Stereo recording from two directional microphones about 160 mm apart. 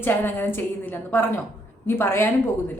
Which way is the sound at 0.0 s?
15° left (ahead or behind).